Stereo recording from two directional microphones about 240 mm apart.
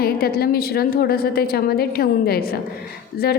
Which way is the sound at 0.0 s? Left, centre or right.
Left.